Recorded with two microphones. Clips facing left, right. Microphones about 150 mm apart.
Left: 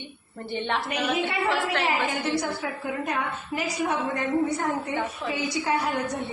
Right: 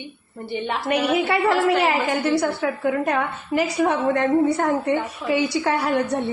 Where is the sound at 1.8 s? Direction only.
70° right (ahead or behind).